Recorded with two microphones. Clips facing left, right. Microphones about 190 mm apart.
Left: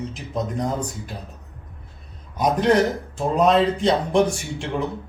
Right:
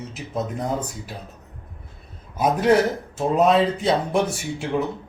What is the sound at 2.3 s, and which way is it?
A man's voice, 5° right (ahead or behind).